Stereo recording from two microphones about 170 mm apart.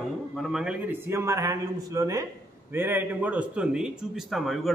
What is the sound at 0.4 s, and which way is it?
A man's voice, centre (ahead or behind).